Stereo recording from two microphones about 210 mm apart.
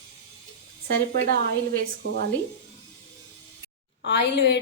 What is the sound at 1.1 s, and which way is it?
A woman's voice, 45° right (ahead or behind).